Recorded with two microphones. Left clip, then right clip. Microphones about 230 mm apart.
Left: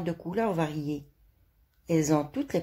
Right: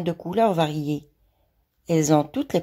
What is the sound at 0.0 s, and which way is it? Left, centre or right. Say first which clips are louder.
A woman's voice: right 8 dB; right.